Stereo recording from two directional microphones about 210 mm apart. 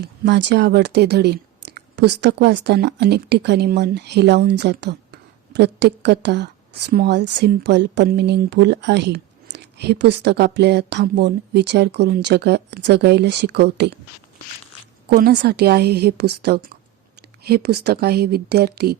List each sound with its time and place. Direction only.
0.0 s speech: 55° right (ahead or behind)
15.1 s speech: 50° right (ahead or behind)